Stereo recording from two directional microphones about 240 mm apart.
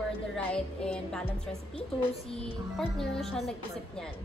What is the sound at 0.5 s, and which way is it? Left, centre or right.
A woman's voice, centre.